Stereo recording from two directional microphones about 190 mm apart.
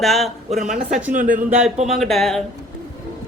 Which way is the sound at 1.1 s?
45° right (ahead or behind).